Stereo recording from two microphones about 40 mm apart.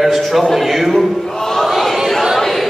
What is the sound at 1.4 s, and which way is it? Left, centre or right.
Crowd, centre.